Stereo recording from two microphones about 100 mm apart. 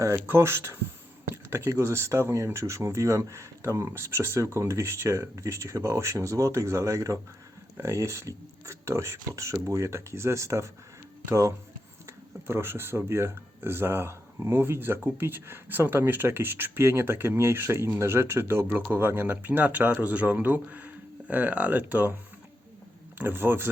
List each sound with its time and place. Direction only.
0.0 s speech: 25° right (ahead or behind)
23.1 s speech: 20° right (ahead or behind)